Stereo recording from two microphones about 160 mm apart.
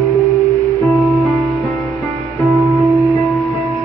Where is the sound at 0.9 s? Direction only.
Centre (ahead or behind).